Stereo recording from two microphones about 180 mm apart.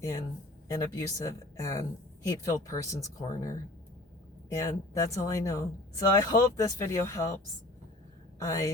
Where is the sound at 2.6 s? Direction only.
15° left (ahead or behind).